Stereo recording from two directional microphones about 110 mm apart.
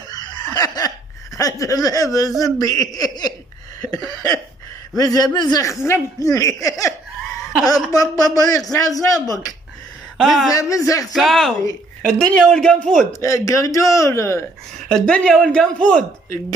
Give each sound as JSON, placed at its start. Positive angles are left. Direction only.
{"t": 0.1, "sound": "a sound", "side_deg": 40}
{"t": 2.4, "sound": "speech", "side_deg": 30}
{"t": 4.9, "sound": "speech", "side_deg": 35}
{"t": 10.1, "sound": "a woman's voice", "side_deg": 0}
{"t": 10.5, "sound": "speech", "side_deg": 30}
{"t": 11.1, "sound": "a man's voice", "side_deg": 5}
{"t": 13.2, "sound": "speech", "side_deg": 30}
{"t": 14.9, "sound": "speech", "side_deg": 5}